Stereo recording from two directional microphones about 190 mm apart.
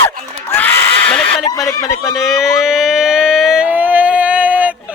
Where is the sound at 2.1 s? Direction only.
Centre (ahead or behind).